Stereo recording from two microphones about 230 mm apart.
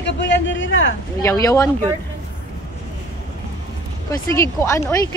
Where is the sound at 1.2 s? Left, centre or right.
Centre.